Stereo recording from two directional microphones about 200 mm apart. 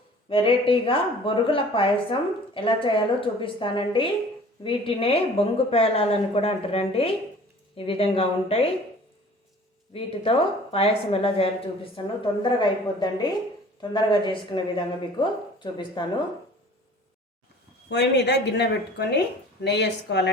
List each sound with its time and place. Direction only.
0.3 s speech: 25° left (ahead or behind)
9.9 s speech: 30° left (ahead or behind)
17.8 s a woman's voice: 55° left (ahead or behind)